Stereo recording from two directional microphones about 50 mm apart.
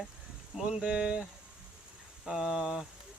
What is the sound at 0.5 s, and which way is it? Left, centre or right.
Speech, centre.